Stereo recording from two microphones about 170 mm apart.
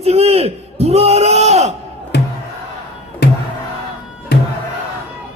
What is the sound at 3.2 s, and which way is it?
Music, 75° left (ahead or behind).